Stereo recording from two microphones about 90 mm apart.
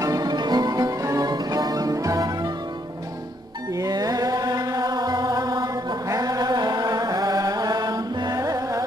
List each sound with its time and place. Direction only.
0.0 s music: 45° right (ahead or behind)
3.7 s music: 40° right (ahead or behind)
6.0 s chant: 40° right (ahead or behind)
8.4 s music: 35° right (ahead or behind)